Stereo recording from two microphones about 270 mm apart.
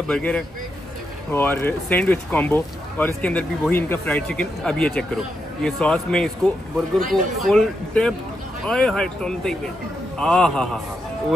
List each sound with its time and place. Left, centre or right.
0.1 s speech: centre